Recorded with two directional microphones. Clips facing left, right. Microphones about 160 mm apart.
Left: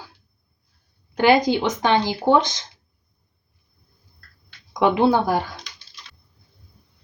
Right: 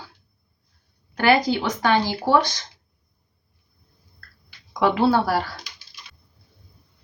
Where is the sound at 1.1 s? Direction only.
20° left (ahead or behind).